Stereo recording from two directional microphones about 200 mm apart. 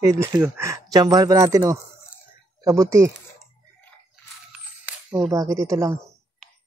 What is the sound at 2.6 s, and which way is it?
Speech, 15° right (ahead or behind).